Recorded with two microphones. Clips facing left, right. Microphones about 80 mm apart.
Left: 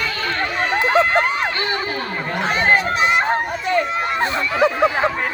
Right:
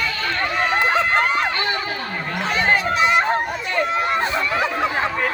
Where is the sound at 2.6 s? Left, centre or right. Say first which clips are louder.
Left 1 dB; left.